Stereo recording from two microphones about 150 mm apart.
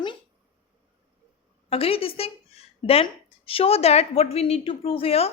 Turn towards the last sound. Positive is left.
turn(degrees=40)  # may be behind; listen again after turning